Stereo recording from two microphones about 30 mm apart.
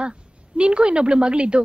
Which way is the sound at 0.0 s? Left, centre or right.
Right.